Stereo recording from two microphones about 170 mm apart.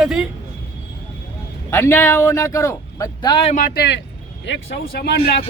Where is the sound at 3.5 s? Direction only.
60° left (ahead or behind).